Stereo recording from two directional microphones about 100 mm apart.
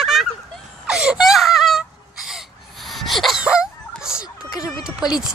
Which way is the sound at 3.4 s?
10° right (ahead or behind).